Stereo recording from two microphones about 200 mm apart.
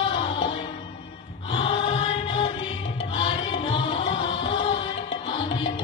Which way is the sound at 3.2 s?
25° left (ahead or behind).